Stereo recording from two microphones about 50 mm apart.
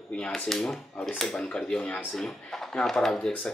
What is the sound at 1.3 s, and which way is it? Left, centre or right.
Speech, left.